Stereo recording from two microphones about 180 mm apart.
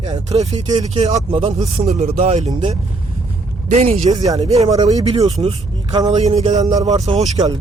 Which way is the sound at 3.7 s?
35° right (ahead or behind).